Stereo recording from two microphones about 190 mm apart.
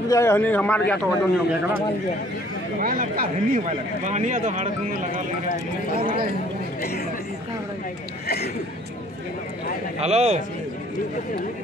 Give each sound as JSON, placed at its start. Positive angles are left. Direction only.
{"t": 0.1, "sound": "a man's voice", "side_deg": 15}
{"t": 1.0, "sound": "a man's voice", "side_deg": -10}
{"t": 2.8, "sound": "speech", "side_deg": -50}
{"t": 5.9, "sound": "speech", "side_deg": -25}
{"t": 9.9, "sound": "a man's voice", "side_deg": -35}